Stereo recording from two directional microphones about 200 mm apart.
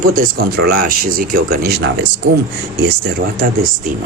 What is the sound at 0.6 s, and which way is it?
Speech, 50° right (ahead or behind).